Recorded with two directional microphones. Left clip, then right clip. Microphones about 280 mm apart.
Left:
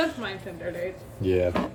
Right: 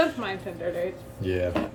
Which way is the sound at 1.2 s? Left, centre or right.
Centre.